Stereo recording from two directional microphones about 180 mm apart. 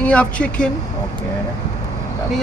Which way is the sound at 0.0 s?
5° left (ahead or behind).